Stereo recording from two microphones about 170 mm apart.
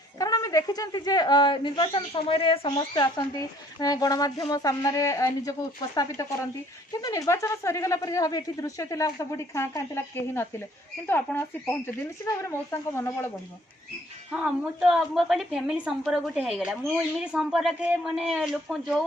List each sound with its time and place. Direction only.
0.2 s a woman's voice: 20° left (ahead or behind)
14.3 s a woman's voice: 5° right (ahead or behind)